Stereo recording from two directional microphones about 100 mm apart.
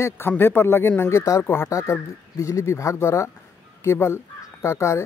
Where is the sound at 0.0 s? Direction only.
20° left (ahead or behind).